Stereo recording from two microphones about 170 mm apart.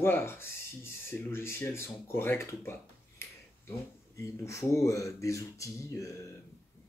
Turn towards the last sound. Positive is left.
turn(degrees=20)  # may be behind; listen again after turning